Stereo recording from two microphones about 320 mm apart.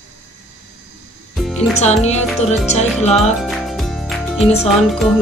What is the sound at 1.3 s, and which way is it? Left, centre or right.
Music, centre.